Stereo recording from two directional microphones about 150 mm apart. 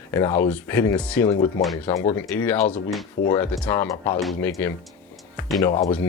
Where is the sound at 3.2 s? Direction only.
90° left.